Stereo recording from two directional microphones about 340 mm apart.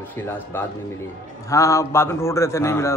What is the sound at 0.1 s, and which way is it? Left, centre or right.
A man's voice, centre.